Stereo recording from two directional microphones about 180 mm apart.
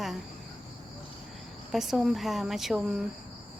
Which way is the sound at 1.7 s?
Centre (ahead or behind).